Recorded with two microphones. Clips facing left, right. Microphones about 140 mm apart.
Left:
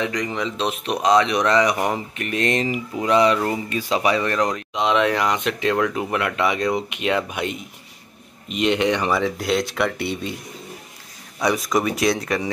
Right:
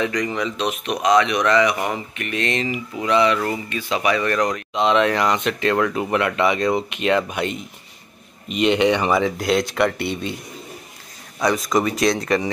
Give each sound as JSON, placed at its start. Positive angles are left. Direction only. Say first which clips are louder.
{"t": 0.0, "sound": "speech", "louder": "right 2 dB", "side_deg": 20}
{"t": 4.7, "sound": "speech", "louder": "right 2 dB", "side_deg": 10}
{"t": 11.3, "sound": "speech", "louder": "right 1 dB", "side_deg": 10}